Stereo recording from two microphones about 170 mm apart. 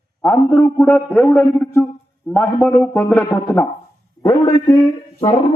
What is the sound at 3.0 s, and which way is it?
Speech, 15° left (ahead or behind).